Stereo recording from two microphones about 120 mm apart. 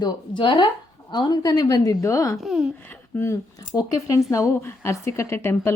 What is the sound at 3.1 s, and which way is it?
Speech, 25° left (ahead or behind).